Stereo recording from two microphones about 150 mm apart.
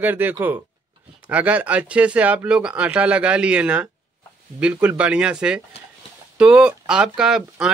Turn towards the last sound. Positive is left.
turn(degrees=-5)  # may be behind; listen again after turning